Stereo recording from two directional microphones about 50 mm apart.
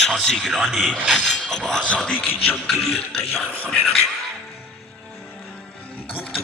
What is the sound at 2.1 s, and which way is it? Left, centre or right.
Speech, left.